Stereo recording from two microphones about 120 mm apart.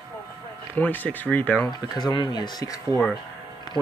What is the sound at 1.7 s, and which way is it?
Speech, 35° left (ahead or behind).